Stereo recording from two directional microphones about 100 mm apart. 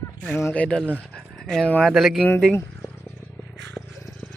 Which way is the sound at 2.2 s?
10° left (ahead or behind).